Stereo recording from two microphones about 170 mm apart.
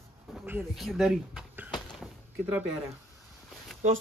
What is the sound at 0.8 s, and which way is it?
Speech, centre (ahead or behind).